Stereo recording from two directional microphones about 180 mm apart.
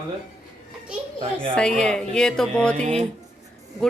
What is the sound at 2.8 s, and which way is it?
Speech, 35° right (ahead or behind).